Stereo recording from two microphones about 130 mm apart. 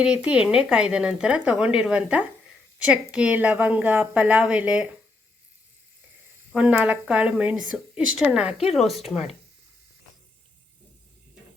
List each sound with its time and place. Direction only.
0.0 s speech: 10° right (ahead or behind)
6.5 s speech: 10° right (ahead or behind)